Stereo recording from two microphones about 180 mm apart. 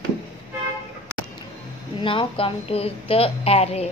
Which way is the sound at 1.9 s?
30° left (ahead or behind).